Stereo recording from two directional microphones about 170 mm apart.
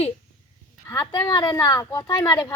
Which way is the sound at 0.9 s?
20° left (ahead or behind).